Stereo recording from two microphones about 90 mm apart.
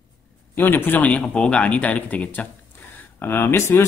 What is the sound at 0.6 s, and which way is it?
Speech, 25° left (ahead or behind).